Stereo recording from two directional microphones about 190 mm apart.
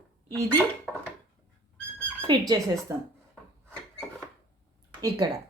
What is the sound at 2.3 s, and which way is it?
Speech, 20° right (ahead or behind).